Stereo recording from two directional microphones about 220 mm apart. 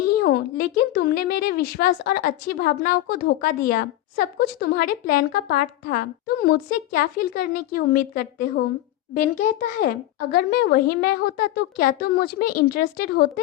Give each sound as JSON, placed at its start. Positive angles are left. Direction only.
{"t": 0.2, "sound": "a woman's voice", "side_deg": 45}